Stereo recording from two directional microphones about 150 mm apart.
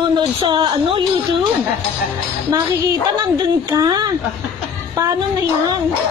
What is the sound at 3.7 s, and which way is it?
Speech, 25° right (ahead or behind).